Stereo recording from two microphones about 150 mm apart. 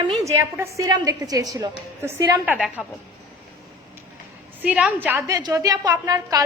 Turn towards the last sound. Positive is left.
turn(degrees=-25)  # may be behind; listen again after turning